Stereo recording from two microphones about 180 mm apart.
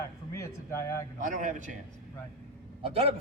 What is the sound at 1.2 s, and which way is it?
Speech, 45° right (ahead or behind).